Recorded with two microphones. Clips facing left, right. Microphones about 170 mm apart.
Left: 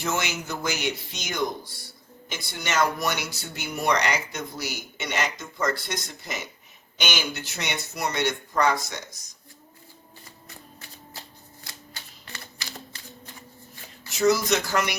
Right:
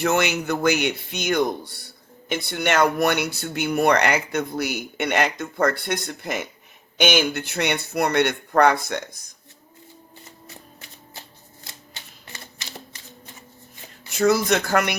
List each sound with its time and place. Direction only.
0.0 s speech: 60° right (ahead or behind)
11.6 s typewriter: 20° right (ahead or behind)
14.1 s speech: 55° right (ahead or behind)